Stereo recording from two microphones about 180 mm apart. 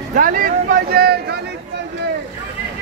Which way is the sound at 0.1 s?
50° right (ahead or behind).